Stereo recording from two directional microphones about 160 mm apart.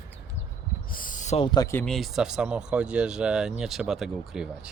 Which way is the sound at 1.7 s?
10° left (ahead or behind).